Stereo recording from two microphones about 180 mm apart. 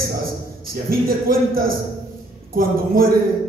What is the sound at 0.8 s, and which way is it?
A man's voice, 55° right (ahead or behind).